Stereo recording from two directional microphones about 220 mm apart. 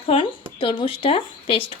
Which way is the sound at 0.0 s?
25° left (ahead or behind).